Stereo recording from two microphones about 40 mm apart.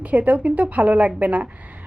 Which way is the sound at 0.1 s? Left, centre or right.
Right.